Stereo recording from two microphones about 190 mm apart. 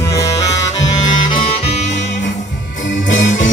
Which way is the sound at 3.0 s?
75° left (ahead or behind).